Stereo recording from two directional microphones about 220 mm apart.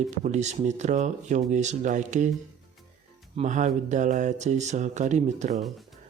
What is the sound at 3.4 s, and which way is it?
Speech, 35° right (ahead or behind).